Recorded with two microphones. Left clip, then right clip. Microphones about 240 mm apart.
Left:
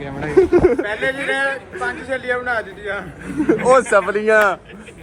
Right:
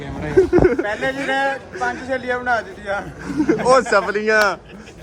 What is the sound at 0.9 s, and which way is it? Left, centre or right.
A man's voice, right.